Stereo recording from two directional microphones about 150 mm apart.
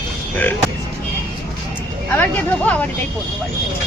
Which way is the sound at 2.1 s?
10° left (ahead or behind).